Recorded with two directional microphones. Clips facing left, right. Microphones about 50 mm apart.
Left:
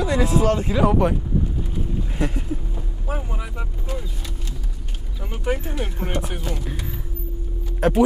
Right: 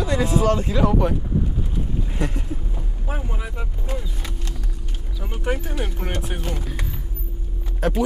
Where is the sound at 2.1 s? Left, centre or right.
Centre.